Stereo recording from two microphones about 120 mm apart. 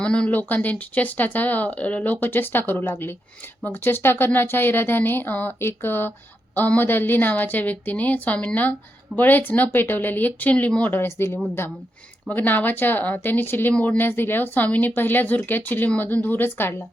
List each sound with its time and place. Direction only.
0.0 s speech: 10° left (ahead or behind)